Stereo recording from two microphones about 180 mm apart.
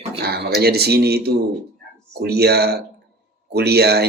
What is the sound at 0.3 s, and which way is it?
Speech, 60° right (ahead or behind).